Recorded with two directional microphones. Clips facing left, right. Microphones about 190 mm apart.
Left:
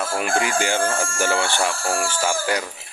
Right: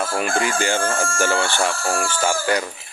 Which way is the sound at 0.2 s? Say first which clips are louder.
Left 1 dB; 10° left (ahead or behind).